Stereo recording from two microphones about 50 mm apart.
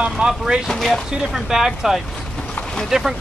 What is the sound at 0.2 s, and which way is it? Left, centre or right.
Speech, right.